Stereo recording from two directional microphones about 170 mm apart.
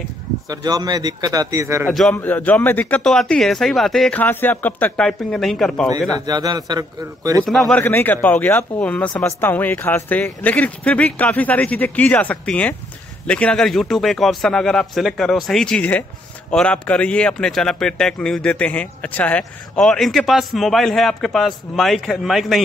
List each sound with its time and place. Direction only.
0.5 s speech: 20° right (ahead or behind)
1.9 s speech: 5° left (ahead or behind)
6.1 s speech: 25° right (ahead or behind)
7.4 s speech: centre (ahead or behind)